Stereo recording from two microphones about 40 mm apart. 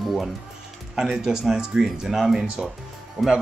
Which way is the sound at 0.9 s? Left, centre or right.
Centre.